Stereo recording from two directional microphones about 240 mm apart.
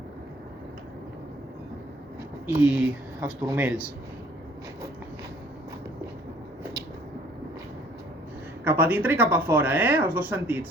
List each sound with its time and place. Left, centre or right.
2.5 s speech: centre
8.6 s speech: centre